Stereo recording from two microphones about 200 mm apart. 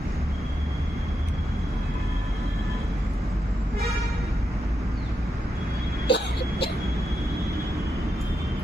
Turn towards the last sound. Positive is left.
turn(degrees=55)  # may be behind; listen again after turning